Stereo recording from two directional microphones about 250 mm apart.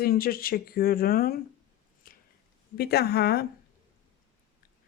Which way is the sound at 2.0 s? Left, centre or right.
Left.